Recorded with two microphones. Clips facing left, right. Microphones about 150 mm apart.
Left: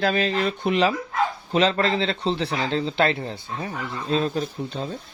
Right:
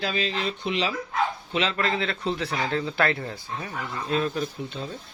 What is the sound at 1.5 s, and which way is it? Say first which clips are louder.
Speech: left 7 dB; 40° left (ahead or behind).